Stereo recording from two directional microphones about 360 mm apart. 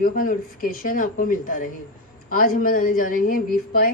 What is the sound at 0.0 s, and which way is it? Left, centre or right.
Speech, left.